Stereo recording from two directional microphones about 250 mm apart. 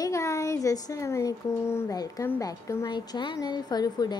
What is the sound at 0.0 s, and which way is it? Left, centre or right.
Speech, centre.